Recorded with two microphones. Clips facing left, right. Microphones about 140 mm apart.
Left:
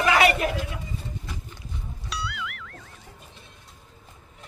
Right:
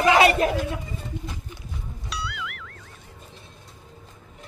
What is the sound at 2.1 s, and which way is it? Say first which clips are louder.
Music: even; centre (ahead or behind).